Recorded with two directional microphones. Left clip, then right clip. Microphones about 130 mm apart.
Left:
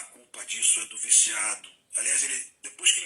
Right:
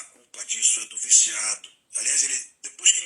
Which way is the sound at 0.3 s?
40° right (ahead or behind).